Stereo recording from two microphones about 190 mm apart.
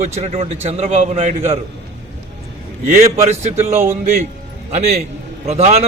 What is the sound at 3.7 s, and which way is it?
Speech, 15° right (ahead or behind).